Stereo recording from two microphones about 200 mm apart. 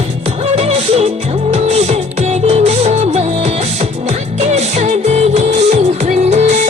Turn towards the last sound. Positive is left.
turn(degrees=-35)  # may be behind; listen again after turning